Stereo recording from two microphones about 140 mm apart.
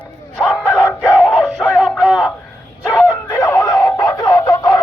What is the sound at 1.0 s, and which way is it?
Music, 5° right (ahead or behind).